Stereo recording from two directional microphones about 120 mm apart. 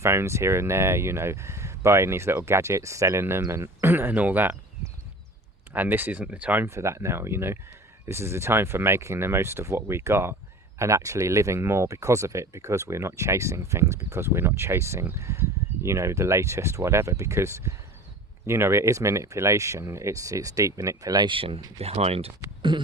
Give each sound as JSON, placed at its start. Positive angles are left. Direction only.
{"t": 0.0, "sound": "speech", "side_deg": -20}
{"t": 21.2, "sound": "speech", "side_deg": -50}
{"t": 22.7, "sound": "a sound", "side_deg": -40}